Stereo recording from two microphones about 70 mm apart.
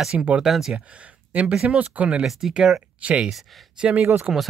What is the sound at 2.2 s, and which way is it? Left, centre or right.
Speech, centre.